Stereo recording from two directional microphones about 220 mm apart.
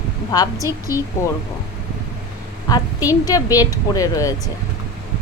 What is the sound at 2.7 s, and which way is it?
A woman's voice, 15° left (ahead or behind).